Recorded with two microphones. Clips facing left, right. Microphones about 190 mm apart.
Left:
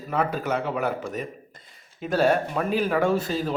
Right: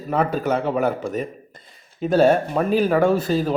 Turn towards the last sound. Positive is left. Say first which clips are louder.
# right 5 dB
turn(degrees=-40)  # may be behind; listen again after turning